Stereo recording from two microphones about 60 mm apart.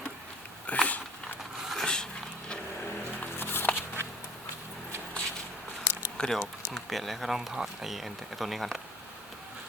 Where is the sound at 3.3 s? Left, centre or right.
Left.